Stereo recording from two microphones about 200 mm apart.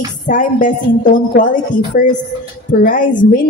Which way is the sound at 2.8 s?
40° left (ahead or behind).